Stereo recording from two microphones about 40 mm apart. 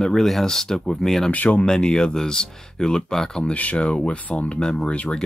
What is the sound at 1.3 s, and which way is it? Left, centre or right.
Speech, left.